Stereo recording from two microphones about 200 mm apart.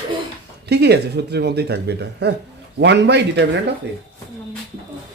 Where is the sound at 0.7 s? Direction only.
55° right (ahead or behind).